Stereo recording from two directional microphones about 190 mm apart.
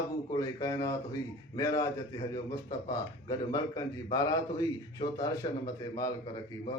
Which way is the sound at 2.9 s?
20° left (ahead or behind).